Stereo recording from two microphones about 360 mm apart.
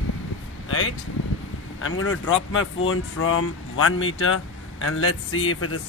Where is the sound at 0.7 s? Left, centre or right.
Left.